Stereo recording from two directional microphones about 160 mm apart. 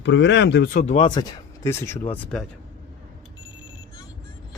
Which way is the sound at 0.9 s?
35° left (ahead or behind).